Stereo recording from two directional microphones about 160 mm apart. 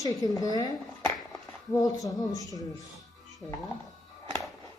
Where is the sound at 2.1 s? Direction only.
20° left (ahead or behind).